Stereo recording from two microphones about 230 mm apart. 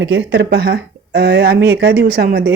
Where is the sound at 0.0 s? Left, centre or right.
Right.